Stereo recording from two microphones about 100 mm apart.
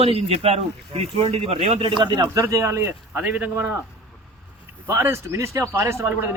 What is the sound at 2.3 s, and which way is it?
A man's voice, 30° right (ahead or behind).